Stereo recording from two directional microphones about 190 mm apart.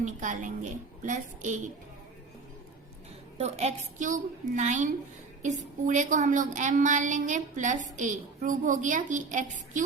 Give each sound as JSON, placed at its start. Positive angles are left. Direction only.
{"t": 0.0, "sound": "a woman's voice", "side_deg": -40}
{"t": 3.3, "sound": "a woman's voice", "side_deg": -35}